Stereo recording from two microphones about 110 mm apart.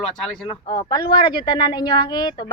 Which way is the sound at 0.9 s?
40° left (ahead or behind).